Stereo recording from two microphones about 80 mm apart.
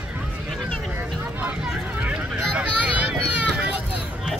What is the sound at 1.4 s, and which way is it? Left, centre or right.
Vehicle, centre.